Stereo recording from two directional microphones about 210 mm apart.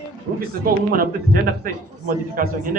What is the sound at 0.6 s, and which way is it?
A man's voice, 45° right (ahead or behind).